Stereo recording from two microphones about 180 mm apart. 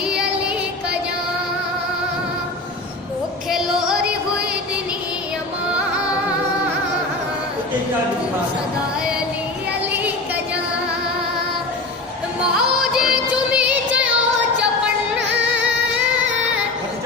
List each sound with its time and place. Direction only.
3.5 s music: 5° right (ahead or behind)
12.9 s music: 5° right (ahead or behind)